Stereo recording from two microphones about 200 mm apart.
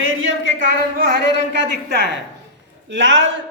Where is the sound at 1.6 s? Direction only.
60° right (ahead or behind).